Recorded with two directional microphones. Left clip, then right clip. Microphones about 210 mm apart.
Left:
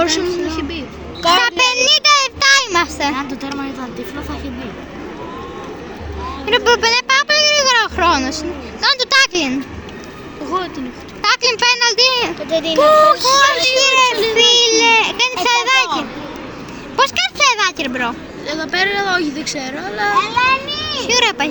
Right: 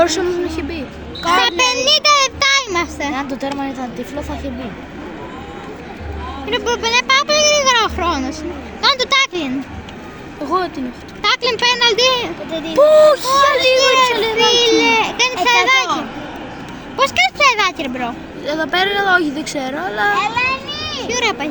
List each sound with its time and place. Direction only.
0.0 s a woman's voice: 60° right (ahead or behind)
1.2 s a sound: 5° left (ahead or behind)
3.2 s speech: 55° right (ahead or behind)
6.5 s speech: centre (ahead or behind)
11.2 s a sound: centre (ahead or behind)
11.9 s a child's voice: centre (ahead or behind)
12.5 s speech: 15° left (ahead or behind)
12.7 s a child's voice: 55° right (ahead or behind)
13.7 s a child's voice: centre (ahead or behind)
18.4 s speech: 55° right (ahead or behind)
21.0 s a child's voice: centre (ahead or behind)